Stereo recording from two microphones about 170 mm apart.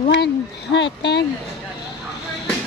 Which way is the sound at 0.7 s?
90° left.